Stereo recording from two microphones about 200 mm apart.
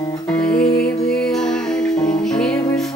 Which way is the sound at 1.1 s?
5° left (ahead or behind).